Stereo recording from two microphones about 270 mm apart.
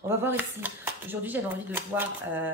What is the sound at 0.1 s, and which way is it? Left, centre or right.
Speech, centre.